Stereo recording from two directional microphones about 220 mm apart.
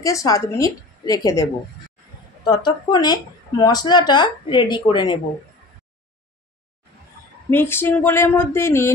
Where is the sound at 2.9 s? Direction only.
20° left (ahead or behind).